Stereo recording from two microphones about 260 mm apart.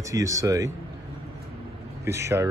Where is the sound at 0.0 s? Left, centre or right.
Centre.